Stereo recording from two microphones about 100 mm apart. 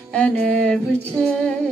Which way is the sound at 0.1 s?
10° left (ahead or behind).